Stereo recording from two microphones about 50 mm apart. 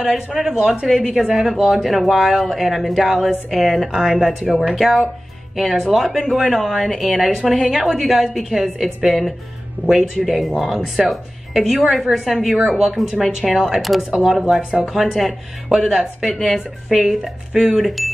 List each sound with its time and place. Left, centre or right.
0.0 s speech: centre
9.8 s speech: right
10.1 s speech: centre
17.7 s speech: centre